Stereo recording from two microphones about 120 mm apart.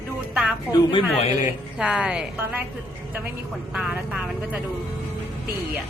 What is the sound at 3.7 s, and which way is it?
Speech, 5° right (ahead or behind).